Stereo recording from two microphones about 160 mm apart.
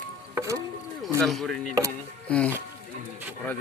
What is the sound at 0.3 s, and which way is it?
Rowboat, 20° right (ahead or behind).